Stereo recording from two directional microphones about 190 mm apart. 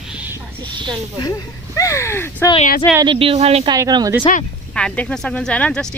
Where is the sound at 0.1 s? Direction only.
10° right (ahead or behind).